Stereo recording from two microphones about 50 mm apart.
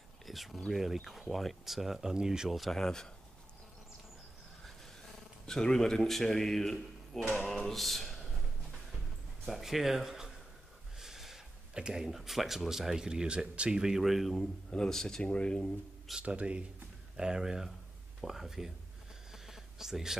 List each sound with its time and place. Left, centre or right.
0.3 s a sound: centre
0.7 s speech: centre
2.6 s speech: centre
5.5 s speech: centre
9.5 s speech: centre
11.0 s a sound: centre
11.9 s speech: centre
14.3 s speech: centre
16.2 s speech: right
17.2 s speech: centre
19.3 s a sound: centre